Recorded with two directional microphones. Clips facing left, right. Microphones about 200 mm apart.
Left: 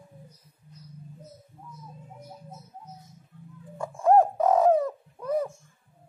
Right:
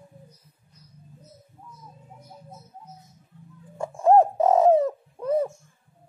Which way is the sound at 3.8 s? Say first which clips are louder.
Right 2 dB; 25° right (ahead or behind).